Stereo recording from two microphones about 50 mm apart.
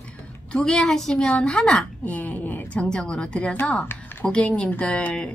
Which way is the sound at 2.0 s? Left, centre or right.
Left.